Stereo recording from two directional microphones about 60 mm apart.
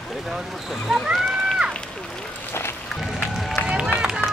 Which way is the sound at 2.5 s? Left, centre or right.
Left.